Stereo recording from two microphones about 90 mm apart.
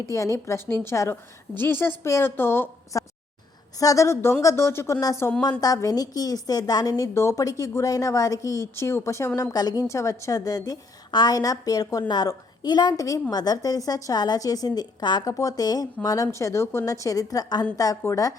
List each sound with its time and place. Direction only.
0.0 s a woman's voice: 35° left (ahead or behind)
2.9 s a woman's voice: 35° left (ahead or behind)
5.4 s a woman's voice: 45° left (ahead or behind)
7.1 s a woman's voice: 30° left (ahead or behind); by 13.0 s 50° left (ahead or behind)
13.0 s a woman's voice: 40° left (ahead or behind)
15.2 s a woman's voice: 40° left (ahead or behind)
18.0 s a woman's voice: 35° left (ahead or behind)